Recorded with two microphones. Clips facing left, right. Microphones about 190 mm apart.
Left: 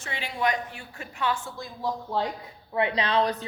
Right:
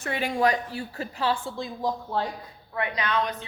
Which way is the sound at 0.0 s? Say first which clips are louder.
Right 7 dB; 50° right (ahead or behind).